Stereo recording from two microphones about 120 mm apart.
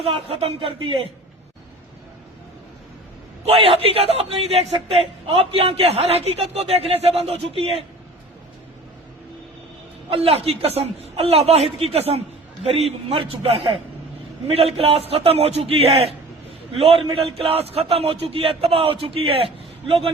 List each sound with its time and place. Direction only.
0.0 s a man's voice: 55° right (ahead or behind)
3.4 s a man's voice: 55° right (ahead or behind)
10.1 s a man's voice: 55° right (ahead or behind)